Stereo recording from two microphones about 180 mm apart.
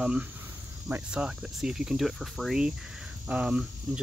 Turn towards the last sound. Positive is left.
turn(degrees=-5)  # may be behind; listen again after turning